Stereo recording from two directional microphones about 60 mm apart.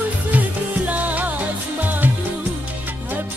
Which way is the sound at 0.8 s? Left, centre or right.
Right.